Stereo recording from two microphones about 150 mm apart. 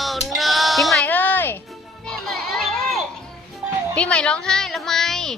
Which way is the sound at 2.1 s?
Centre (ahead or behind).